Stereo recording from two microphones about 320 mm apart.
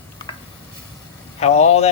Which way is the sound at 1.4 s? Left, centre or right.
Centre.